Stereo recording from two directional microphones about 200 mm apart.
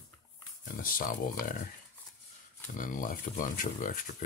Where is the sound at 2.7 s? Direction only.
40° left (ahead or behind).